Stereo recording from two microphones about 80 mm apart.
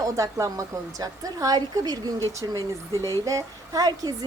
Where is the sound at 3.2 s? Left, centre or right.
Right.